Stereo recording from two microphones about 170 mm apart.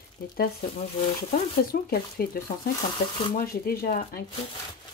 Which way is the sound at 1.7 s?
60° left (ahead or behind).